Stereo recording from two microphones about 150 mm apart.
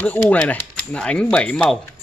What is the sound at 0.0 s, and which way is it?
Speech, 10° left (ahead or behind).